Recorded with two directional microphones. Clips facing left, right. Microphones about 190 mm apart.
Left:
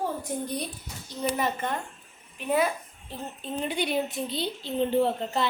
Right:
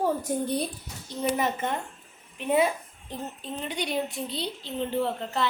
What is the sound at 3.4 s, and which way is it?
A woman's voice, 5° left (ahead or behind).